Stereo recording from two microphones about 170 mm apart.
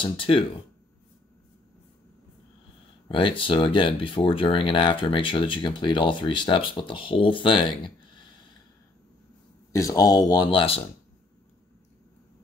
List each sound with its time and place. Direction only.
0.0 s speech: 30° left (ahead or behind)
3.1 s speech: 30° left (ahead or behind)
7.8 s a sound: 25° left (ahead or behind)
9.7 s speech: 20° left (ahead or behind)